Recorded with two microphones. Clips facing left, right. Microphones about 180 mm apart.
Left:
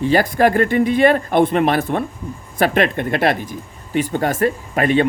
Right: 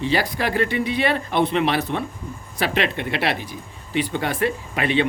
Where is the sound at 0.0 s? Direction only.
45° left (ahead or behind).